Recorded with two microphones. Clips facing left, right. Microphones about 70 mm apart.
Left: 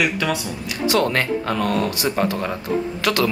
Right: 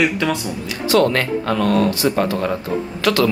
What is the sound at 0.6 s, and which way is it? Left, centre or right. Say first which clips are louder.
Speech: right 4 dB; left.